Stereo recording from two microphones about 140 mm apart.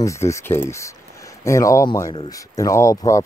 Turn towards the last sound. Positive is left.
turn(degrees=20)  # may be behind; listen again after turning